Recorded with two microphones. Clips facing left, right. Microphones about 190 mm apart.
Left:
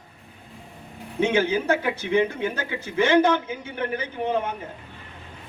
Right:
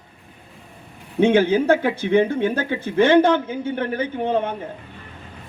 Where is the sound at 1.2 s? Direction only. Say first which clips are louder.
Right 6 dB; 55° right (ahead or behind).